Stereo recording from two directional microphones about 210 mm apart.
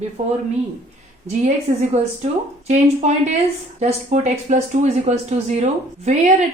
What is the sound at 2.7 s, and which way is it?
Speech, 35° right (ahead or behind).